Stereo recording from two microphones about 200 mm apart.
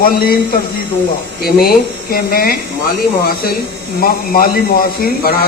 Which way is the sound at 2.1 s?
45° left (ahead or behind).